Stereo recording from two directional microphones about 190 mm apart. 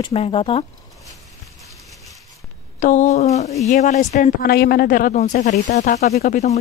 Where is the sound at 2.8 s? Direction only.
40° left (ahead or behind).